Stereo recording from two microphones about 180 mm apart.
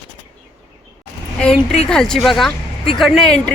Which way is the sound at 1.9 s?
5° left (ahead or behind).